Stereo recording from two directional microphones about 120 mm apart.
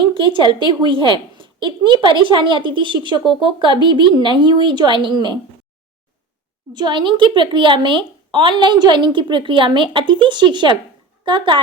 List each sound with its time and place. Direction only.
0.0 s a child's voice: 45° right (ahead or behind)
6.7 s a child's voice: 40° right (ahead or behind)